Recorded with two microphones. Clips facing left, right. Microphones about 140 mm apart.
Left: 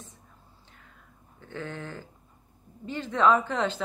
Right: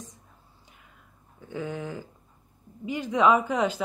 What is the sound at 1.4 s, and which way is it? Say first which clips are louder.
Speech: right 4 dB; 10° right (ahead or behind).